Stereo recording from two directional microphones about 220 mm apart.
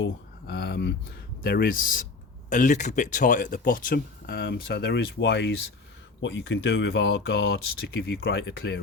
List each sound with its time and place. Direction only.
0.0 s speech: 50° left (ahead or behind)